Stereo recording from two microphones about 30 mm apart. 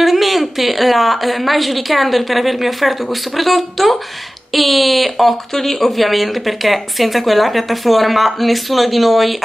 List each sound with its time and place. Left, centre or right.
0.0 s speech: centre